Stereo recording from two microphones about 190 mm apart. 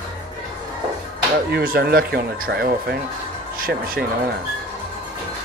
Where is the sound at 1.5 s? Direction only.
55° right (ahead or behind).